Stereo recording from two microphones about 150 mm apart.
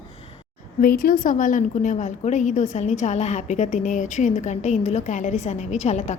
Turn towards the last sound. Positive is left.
turn(degrees=50)  # may be behind; listen again after turning